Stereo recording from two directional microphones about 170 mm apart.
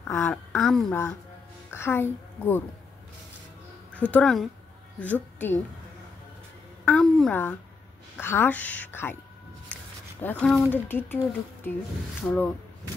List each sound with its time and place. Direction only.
0.1 s a woman's voice: 10° left (ahead or behind)
0.5 s speech: centre (ahead or behind)
1.7 s a woman's voice: 15° left (ahead or behind)
3.9 s a woman's voice: 10° left (ahead or behind)
6.8 s a sound: 5° left (ahead or behind)
8.2 s a woman's voice: 10° left (ahead or behind)
10.2 s a woman's voice: 5° left (ahead or behind)
12.2 s a woman's voice: 5° left (ahead or behind)